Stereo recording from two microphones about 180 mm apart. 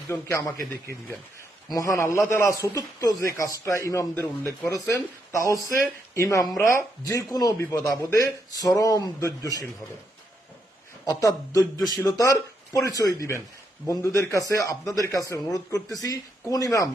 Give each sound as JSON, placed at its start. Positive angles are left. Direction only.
{"t": 0.1, "sound": "a man's voice", "side_deg": 15}
{"t": 1.6, "sound": "a man's voice", "side_deg": 20}
{"t": 11.0, "sound": "a man's voice", "side_deg": 20}